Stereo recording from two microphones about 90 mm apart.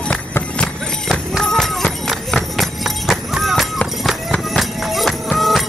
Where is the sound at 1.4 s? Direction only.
5° left (ahead or behind).